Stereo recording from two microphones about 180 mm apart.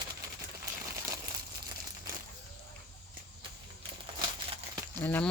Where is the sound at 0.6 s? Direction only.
20° right (ahead or behind).